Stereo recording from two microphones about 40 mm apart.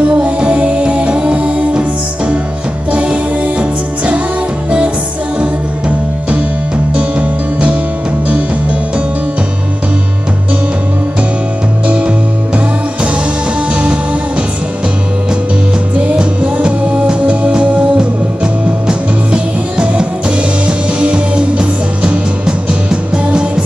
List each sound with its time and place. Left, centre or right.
0.0 s music: right
15.9 s music: right